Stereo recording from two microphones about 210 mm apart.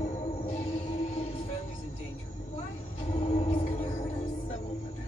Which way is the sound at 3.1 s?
30° left (ahead or behind).